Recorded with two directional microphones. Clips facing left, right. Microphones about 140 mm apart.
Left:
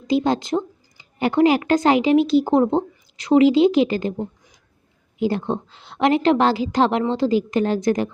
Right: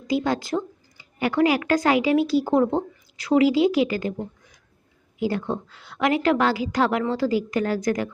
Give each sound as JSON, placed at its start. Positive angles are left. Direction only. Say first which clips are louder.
{"t": 0.1, "sound": "speech", "louder": "left 4 dB", "side_deg": 25}